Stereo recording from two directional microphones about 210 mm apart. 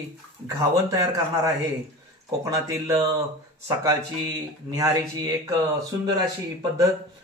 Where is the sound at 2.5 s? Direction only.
15° right (ahead or behind).